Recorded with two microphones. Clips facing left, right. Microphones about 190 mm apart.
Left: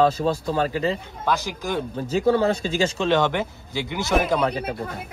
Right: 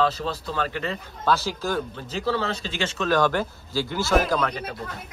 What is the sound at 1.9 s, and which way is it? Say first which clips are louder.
Speech: left 7 dB; 45° left (ahead or behind).